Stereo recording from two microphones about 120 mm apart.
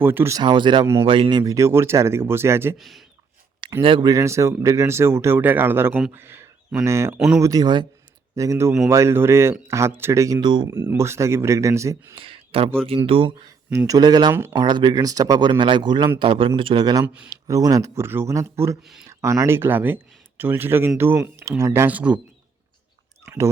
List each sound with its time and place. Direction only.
0.0 s speech: 15° right (ahead or behind)
0.3 s speech: 40° right (ahead or behind); by 2.7 s 20° right (ahead or behind)
2.7 s speech: centre (ahead or behind)
3.6 s a sound: 45° right (ahead or behind)
4.0 s speech: 25° right (ahead or behind)
7.2 s speech: 5° right (ahead or behind)
7.4 s speech: 30° right (ahead or behind)
8.4 s speech: 25° right (ahead or behind)
10.4 s speech: 40° right (ahead or behind)
10.7 s speech: 25° right (ahead or behind)
12.1 s a man's voice: 50° right (ahead or behind)
13.7 s a man's voice: 30° right (ahead or behind); by 22.2 s 10° right (ahead or behind)
23.2 s chewing: 25° right (ahead or behind)